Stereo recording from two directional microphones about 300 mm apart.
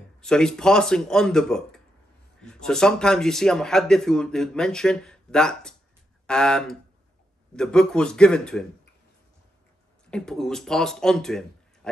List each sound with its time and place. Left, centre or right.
0.2 s speech: centre
10.1 s speech: centre